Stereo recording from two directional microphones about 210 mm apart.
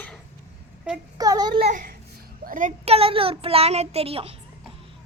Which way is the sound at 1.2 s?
20° right (ahead or behind).